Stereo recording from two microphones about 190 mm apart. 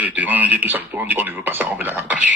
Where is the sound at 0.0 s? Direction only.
10° right (ahead or behind).